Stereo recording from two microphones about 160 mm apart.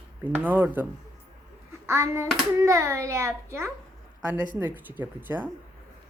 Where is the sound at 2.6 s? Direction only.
20° right (ahead or behind).